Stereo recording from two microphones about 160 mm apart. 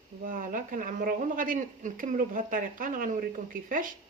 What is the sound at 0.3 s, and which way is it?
Speech, 55° right (ahead or behind).